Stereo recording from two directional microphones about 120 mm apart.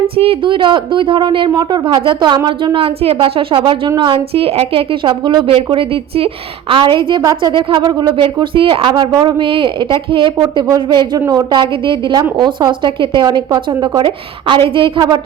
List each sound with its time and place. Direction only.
0.2 s a woman's voice: 50° right (ahead or behind)